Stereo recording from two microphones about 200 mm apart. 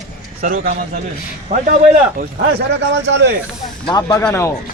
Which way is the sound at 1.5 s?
30° right (ahead or behind).